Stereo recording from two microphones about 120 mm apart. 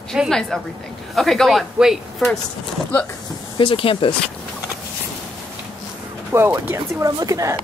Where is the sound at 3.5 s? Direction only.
45° left (ahead or behind).